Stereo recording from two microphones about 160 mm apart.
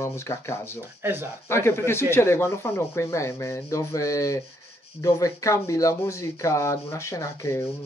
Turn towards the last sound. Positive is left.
turn(degrees=20)  # may be behind; listen again after turning